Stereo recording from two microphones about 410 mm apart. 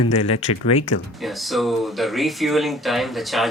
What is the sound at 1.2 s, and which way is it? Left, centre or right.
Speech, centre.